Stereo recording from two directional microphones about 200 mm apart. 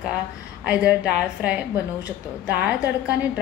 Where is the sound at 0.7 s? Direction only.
5° right (ahead or behind).